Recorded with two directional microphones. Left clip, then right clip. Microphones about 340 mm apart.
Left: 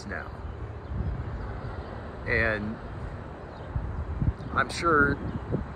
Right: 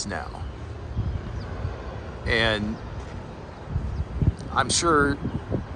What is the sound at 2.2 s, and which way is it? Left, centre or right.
Speech, centre.